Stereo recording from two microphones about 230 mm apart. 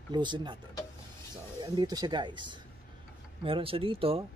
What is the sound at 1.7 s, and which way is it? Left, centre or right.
Speech, centre.